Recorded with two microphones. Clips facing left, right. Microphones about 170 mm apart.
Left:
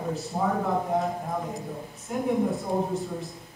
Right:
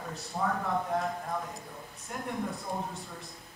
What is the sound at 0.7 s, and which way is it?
Speech, 5° left (ahead or behind).